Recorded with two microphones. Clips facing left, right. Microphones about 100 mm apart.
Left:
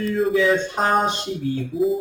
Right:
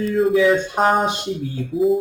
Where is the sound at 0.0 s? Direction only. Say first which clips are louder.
Right 3 dB; centre (ahead or behind).